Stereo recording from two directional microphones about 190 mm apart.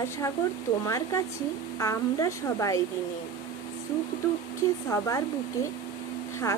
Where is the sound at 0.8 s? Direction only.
15° left (ahead or behind).